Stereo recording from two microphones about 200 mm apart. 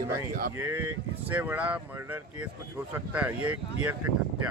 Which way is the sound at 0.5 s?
10° right (ahead or behind).